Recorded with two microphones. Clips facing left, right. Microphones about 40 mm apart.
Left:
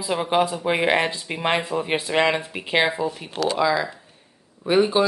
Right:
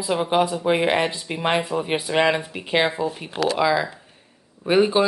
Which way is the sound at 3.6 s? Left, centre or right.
Centre.